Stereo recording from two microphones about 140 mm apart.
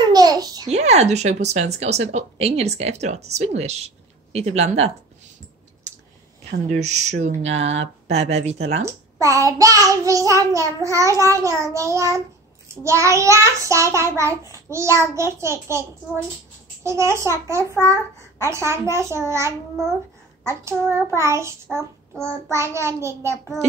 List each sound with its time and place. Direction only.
0.0 s babbling: 30° right (ahead or behind)
0.7 s speech: 50° right (ahead or behind)
6.5 s speech: 55° right (ahead or behind)
8.8 s a child's voice: 20° right (ahead or behind)
16.8 s a child's voice: 20° right (ahead or behind)